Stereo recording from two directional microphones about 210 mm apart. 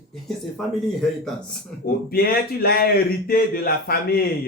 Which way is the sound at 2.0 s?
45° left (ahead or behind).